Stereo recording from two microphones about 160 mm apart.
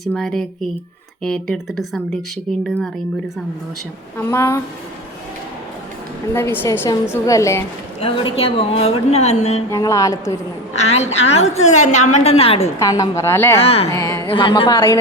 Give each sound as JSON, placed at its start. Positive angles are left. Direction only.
{"t": 0.0, "sound": "speech", "side_deg": 5}
{"t": 4.2, "sound": "a woman's voice", "side_deg": 15}
{"t": 6.3, "sound": "a woman's voice", "side_deg": 15}
{"t": 8.0, "sound": "a woman's voice", "side_deg": 35}
{"t": 9.7, "sound": "a woman's voice", "side_deg": 20}
{"t": 10.8, "sound": "a woman's voice", "side_deg": 45}
{"t": 12.8, "sound": "a woman's voice", "side_deg": 20}
{"t": 13.6, "sound": "a woman's voice", "side_deg": 40}
{"t": 13.9, "sound": "a sound", "side_deg": 20}
{"t": 14.3, "sound": "a woman's voice", "side_deg": 30}